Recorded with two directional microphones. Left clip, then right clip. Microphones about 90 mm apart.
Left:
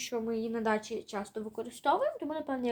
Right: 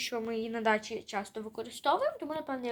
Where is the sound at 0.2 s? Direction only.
15° right (ahead or behind).